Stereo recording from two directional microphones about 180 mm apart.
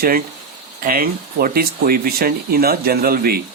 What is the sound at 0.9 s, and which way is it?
Speech, 50° right (ahead or behind).